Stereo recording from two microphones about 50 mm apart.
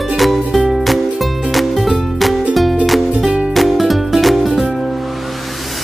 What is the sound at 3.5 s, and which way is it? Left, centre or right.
Music, centre.